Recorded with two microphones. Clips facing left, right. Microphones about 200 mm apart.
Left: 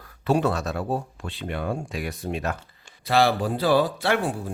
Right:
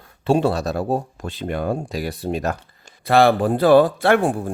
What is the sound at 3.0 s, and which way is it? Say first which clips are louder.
Speech: right 6 dB; 55° right (ahead or behind).